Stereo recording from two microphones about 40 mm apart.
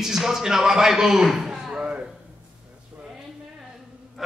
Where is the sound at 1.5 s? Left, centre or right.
Right.